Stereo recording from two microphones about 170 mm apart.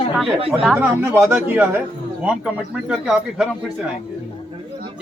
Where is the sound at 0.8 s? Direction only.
10° right (ahead or behind).